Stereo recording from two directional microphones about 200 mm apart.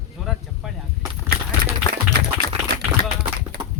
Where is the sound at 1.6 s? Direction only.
55° right (ahead or behind).